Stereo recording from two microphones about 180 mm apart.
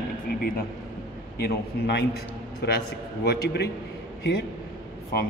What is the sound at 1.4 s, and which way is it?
Speech, 65° left (ahead or behind).